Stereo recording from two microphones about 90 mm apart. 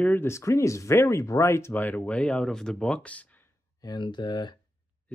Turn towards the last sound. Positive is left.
turn(degrees=55)  # may be behind; listen again after turning